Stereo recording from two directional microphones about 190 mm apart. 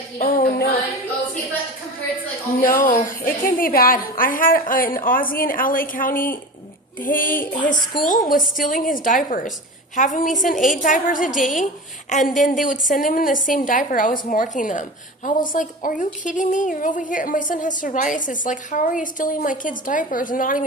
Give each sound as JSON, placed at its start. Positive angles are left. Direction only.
{"t": 0.2, "sound": "music", "side_deg": 50}
{"t": 2.6, "sound": "a woman's voice", "side_deg": 50}